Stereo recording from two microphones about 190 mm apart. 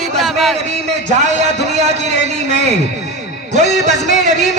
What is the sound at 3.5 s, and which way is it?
Speech, 40° right (ahead or behind).